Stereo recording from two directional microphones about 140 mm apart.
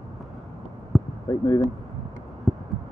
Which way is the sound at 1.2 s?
25° left (ahead or behind).